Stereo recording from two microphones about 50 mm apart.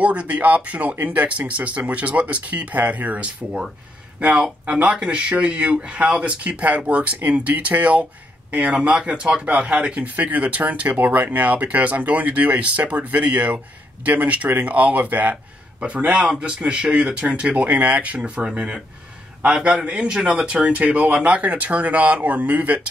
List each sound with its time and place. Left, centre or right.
0.0 s speech: right
5.0 s speech: right
18.2 s speech: centre